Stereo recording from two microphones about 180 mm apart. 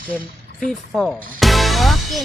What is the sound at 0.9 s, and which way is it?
Music, centre (ahead or behind).